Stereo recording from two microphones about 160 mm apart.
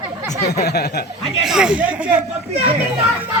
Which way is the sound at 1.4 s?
5° right (ahead or behind).